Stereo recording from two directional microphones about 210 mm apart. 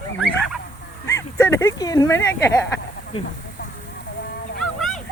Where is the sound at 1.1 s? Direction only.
15° left (ahead or behind).